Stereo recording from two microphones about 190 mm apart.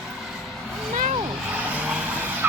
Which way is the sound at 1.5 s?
5° right (ahead or behind).